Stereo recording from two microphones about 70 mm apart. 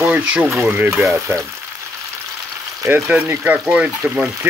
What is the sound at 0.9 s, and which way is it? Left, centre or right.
Speech, centre.